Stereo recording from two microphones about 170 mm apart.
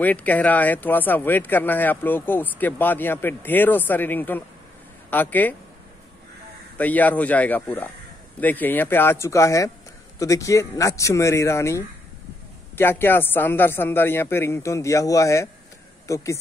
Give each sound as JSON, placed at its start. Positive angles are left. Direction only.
{"t": 0.0, "sound": "speech", "side_deg": 10}
{"t": 6.8, "sound": "speech", "side_deg": 10}